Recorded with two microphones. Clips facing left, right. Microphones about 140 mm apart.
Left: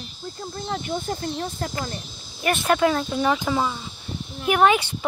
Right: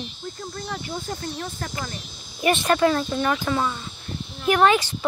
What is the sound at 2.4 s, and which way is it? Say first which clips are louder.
Speech: right 1 dB; centre (ahead or behind).